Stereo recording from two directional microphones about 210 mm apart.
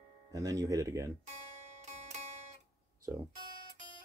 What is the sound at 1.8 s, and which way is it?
Zither, 30° right (ahead or behind).